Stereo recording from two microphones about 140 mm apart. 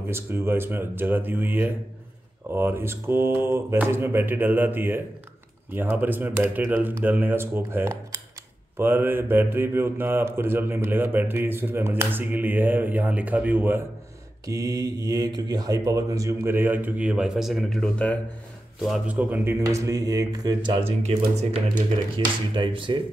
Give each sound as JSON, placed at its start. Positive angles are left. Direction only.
{"t": 0.1, "sound": "speech", "side_deg": -15}
{"t": 18.8, "sound": "speech", "side_deg": -5}
{"t": 21.4, "sound": "speech", "side_deg": -55}
{"t": 22.1, "sound": "speech", "side_deg": -40}